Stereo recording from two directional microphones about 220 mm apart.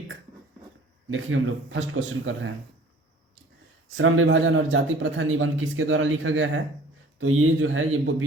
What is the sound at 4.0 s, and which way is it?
A man's voice, 55° right (ahead or behind).